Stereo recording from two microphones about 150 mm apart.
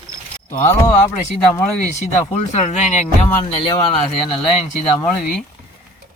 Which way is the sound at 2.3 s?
50° left (ahead or behind).